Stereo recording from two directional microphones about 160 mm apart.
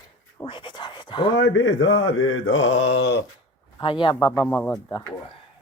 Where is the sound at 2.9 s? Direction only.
90° left.